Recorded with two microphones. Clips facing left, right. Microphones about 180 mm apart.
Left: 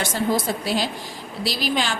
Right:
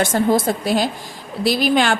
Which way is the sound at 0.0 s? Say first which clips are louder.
Right 6 dB; 50° right (ahead or behind).